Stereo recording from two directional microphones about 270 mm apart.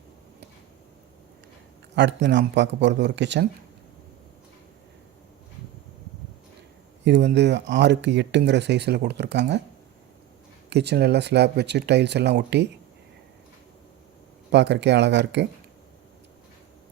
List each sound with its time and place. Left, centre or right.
2.0 s speech: right
7.0 s speech: right
10.7 s speech: right
14.5 s speech: right